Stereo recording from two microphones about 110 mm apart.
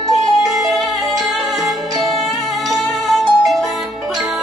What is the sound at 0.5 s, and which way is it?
Music, centre (ahead or behind).